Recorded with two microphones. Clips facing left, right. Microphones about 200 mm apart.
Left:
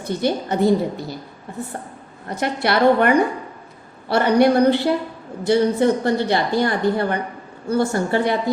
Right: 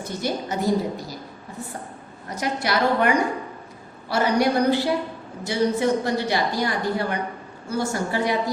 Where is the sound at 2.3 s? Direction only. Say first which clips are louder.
Left 4 dB; 60° left (ahead or behind).